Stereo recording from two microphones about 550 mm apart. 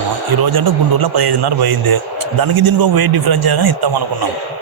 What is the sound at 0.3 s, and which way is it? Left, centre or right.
A man's voice, right.